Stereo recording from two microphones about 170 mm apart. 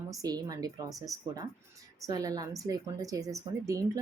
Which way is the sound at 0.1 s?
20° right (ahead or behind).